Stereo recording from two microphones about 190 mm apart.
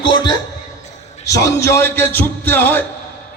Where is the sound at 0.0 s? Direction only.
20° left (ahead or behind).